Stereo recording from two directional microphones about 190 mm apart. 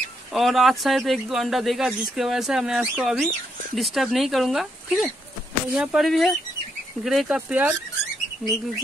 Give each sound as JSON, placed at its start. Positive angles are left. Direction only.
{"t": 0.3, "sound": "speech", "side_deg": 0}